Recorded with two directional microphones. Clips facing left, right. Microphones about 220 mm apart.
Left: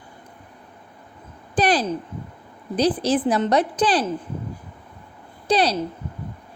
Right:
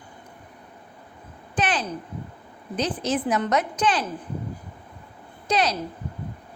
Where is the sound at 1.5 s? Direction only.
35° left (ahead or behind).